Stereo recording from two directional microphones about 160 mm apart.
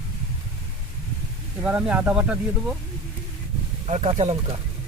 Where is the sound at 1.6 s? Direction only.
5° right (ahead or behind).